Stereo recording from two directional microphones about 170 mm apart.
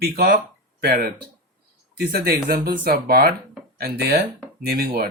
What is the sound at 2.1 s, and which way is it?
Speech, 60° right (ahead or behind).